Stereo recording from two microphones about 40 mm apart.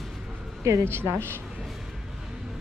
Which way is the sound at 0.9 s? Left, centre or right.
Right.